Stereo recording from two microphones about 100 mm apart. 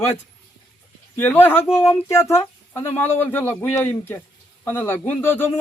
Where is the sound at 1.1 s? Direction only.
20° left (ahead or behind).